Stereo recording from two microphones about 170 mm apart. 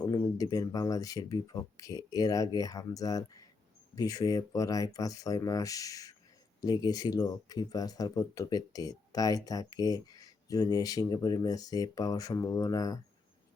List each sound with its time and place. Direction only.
0.0 s speech: 25° left (ahead or behind)